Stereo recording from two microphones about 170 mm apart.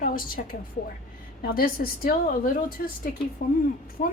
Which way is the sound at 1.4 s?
60° left (ahead or behind).